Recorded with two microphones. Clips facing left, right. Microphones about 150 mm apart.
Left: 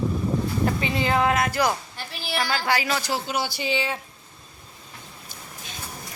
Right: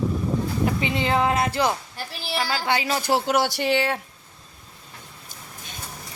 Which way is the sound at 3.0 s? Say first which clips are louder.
Right 6 dB; 65° right (ahead or behind).